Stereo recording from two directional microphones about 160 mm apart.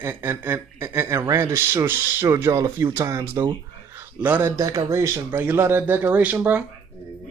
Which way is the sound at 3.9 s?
15° right (ahead or behind).